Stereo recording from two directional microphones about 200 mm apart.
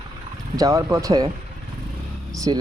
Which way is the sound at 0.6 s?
15° right (ahead or behind).